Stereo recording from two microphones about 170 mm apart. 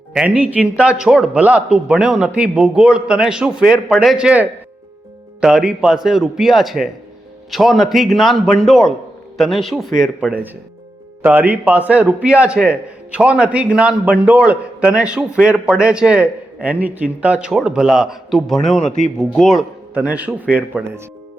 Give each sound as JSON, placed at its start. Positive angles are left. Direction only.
{"t": 0.1, "sound": "a man's voice", "side_deg": -5}
{"t": 18.9, "sound": "speech", "side_deg": 45}
{"t": 19.2, "sound": "a man's voice", "side_deg": 5}